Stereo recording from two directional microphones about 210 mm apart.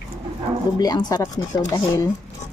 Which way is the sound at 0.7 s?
20° left (ahead or behind).